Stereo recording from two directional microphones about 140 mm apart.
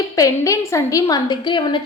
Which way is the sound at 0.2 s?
25° left (ahead or behind).